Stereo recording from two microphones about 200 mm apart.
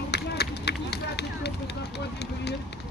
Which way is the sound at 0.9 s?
55° left (ahead or behind).